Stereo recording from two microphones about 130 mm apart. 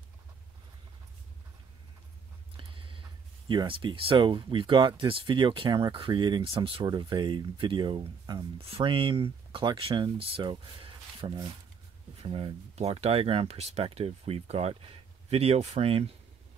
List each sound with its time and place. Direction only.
2.5 s speech: 40° right (ahead or behind)
8.5 s speech: 45° right (ahead or behind)